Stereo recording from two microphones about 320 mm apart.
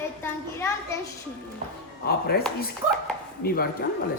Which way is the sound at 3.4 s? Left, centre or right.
Left.